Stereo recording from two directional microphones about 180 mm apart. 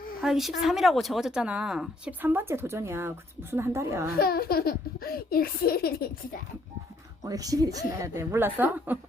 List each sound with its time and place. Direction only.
0.2 s a woman's voice: centre (ahead or behind)
4.2 s speech: 55° left (ahead or behind)
7.3 s a woman's voice: 20° right (ahead or behind)